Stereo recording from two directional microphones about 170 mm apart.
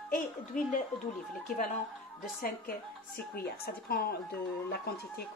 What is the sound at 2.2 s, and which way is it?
Speech, 55° left (ahead or behind).